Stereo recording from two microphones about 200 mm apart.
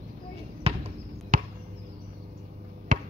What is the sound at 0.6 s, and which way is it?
Basketball bounce, 30° right (ahead or behind).